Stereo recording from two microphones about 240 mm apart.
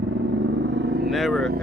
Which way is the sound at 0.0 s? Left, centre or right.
Right.